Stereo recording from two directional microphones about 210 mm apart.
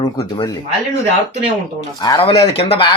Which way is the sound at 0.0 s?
20° left (ahead or behind).